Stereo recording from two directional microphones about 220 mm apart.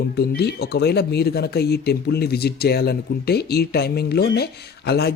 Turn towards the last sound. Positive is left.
turn(degrees=45)  # may be behind; listen again after turning